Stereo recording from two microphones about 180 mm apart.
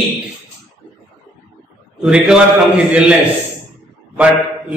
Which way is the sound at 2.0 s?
5° right (ahead or behind).